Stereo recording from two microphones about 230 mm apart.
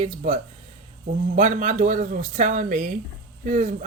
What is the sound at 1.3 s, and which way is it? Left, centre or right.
A woman's voice, right.